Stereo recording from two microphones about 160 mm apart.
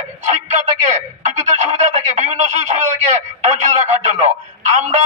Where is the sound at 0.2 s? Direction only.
45° right (ahead or behind).